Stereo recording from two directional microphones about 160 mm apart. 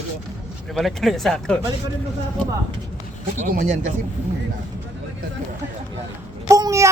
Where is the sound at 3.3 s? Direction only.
55° right (ahead or behind).